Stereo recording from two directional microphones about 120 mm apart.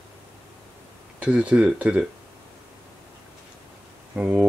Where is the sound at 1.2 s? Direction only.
10° right (ahead or behind).